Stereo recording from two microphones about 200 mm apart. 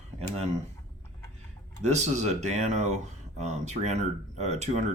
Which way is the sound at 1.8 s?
35° right (ahead or behind).